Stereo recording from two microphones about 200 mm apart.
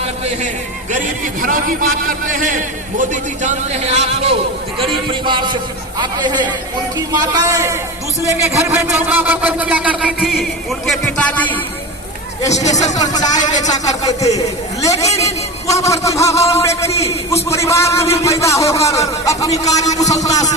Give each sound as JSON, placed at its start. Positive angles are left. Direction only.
{"t": 0.0, "sound": "a man's voice", "side_deg": -35}
{"t": 12.8, "sound": "music", "side_deg": 20}
{"t": 13.6, "sound": "a man's voice", "side_deg": 20}